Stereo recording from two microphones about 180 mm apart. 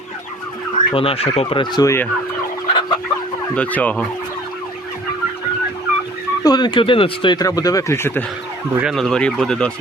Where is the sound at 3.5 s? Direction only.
10° left (ahead or behind).